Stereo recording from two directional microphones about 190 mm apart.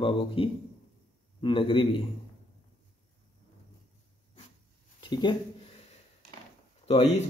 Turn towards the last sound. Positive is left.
turn(degrees=35)  # may be behind; listen again after turning